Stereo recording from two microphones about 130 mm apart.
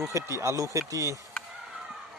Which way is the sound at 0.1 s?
20° right (ahead or behind).